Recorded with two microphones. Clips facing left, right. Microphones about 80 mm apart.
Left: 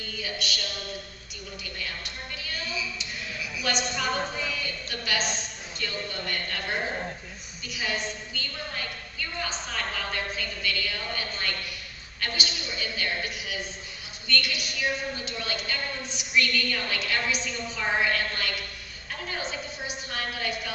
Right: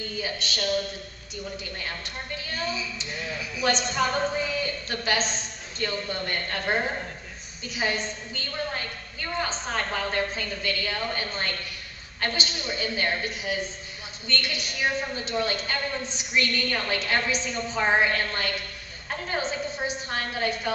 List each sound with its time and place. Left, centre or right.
0.2 s a woman's voice: right
2.3 s a woman's voice: right